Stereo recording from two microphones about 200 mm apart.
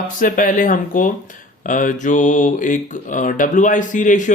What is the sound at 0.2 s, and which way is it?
Speech, 40° left (ahead or behind).